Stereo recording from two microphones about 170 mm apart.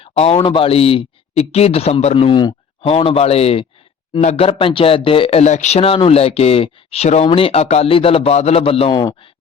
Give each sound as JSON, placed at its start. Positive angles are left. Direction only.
{"t": 0.0, "sound": "speech", "side_deg": 35}